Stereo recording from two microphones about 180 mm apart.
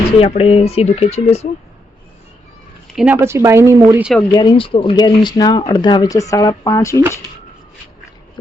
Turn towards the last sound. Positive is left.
turn(degrees=15)  # may be behind; listen again after turning